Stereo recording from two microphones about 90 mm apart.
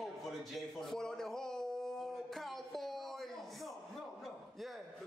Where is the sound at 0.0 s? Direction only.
Centre (ahead or behind).